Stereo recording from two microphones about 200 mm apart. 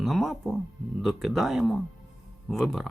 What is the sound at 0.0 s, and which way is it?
Speech, centre (ahead or behind).